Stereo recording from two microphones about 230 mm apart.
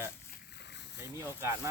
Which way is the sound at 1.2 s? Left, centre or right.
Centre.